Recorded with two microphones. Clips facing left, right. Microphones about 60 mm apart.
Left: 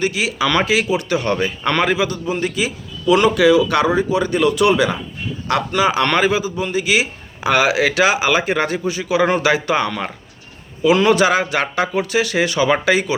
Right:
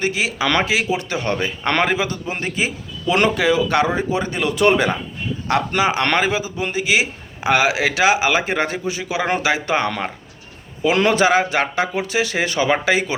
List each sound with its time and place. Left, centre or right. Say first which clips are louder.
0.0 s a man's voice: left 1 dB; right
0.6 s a man's voice: left 2 dB; right
4.6 s a man's voice: right 3 dB; right
5.5 s a man's voice: left 1 dB; right
12.6 s a man's voice: left 1 dB; right